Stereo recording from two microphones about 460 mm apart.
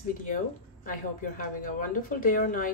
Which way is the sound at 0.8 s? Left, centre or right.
Centre.